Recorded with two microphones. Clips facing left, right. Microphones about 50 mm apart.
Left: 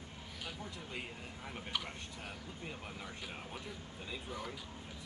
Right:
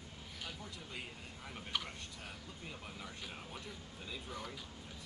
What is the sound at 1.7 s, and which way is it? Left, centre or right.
Speech, centre.